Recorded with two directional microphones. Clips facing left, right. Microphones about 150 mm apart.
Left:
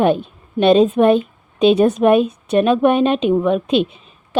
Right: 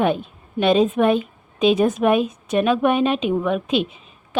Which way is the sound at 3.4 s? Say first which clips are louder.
Left 5 dB; 30° left (ahead or behind).